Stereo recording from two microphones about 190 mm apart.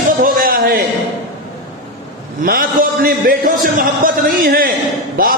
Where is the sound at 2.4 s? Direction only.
50° right (ahead or behind).